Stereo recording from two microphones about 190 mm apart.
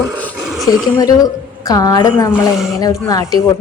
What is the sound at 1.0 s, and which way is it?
A woman's voice, 20° left (ahead or behind).